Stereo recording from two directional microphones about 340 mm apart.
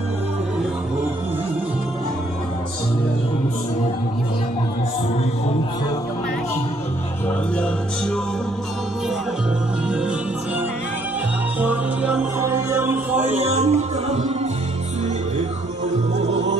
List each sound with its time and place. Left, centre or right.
11.6 s music: centre
13.5 s music: centre